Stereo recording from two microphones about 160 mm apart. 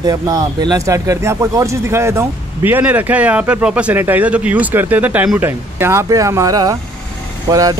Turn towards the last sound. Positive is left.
turn(degrees=-20)  # may be behind; listen again after turning